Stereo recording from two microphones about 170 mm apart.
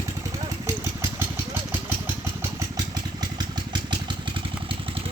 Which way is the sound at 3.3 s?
25° right (ahead or behind).